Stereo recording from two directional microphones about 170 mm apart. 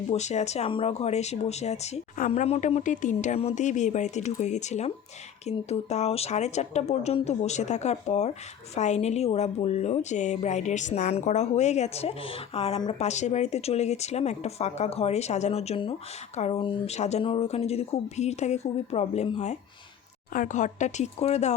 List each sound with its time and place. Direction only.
0.1 s a woman's voice: 40° left (ahead or behind)